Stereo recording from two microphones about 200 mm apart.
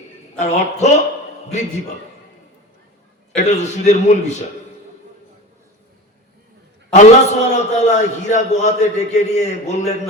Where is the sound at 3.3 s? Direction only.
35° left (ahead or behind).